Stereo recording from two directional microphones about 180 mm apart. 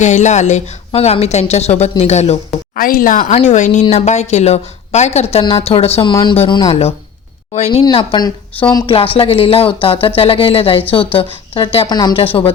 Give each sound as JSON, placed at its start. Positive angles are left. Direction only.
{"t": 0.0, "sound": "speech", "side_deg": 40}
{"t": 2.7, "sound": "speech", "side_deg": 50}